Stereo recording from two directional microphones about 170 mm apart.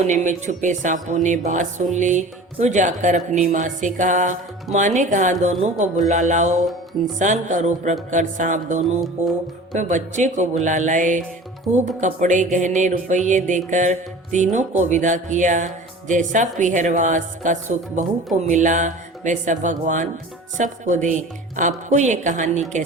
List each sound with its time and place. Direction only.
0.0 s speech: 45° right (ahead or behind)